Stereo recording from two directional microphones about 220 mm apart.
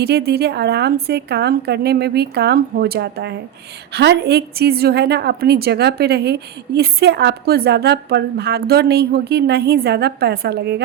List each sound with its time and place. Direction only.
0.0 s a woman's voice: 45° right (ahead or behind)